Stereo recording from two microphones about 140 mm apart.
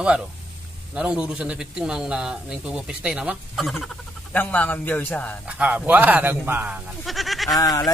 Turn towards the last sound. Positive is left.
turn(degrees=25)  # may be behind; listen again after turning